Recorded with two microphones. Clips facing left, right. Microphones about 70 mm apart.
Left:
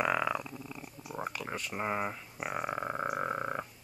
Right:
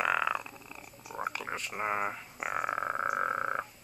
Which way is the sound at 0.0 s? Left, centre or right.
Centre.